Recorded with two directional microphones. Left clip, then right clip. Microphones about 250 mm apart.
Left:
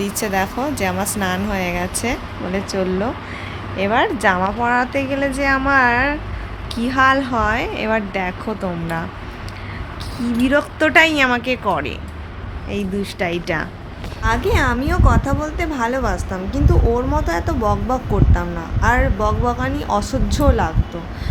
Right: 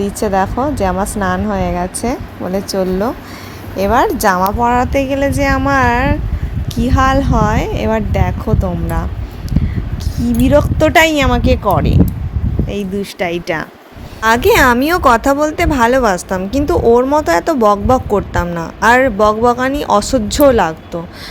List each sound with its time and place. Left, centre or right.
0.0 s a woman's voice: right
10.2 s a woman's voice: right